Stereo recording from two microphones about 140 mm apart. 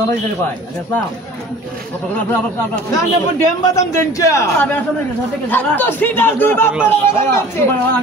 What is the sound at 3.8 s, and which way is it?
A man's voice, 20° left (ahead or behind).